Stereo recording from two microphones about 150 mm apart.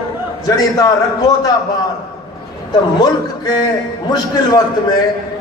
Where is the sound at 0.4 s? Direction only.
25° left (ahead or behind).